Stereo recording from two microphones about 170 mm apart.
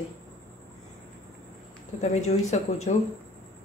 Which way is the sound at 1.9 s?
40° left (ahead or behind).